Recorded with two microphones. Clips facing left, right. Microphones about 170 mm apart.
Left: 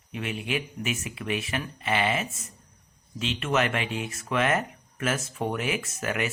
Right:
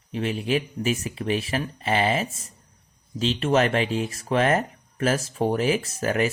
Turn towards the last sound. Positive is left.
turn(degrees=-35)  # may be behind; listen again after turning